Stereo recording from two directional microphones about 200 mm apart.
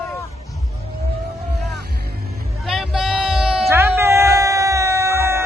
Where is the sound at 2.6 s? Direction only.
Centre (ahead or behind).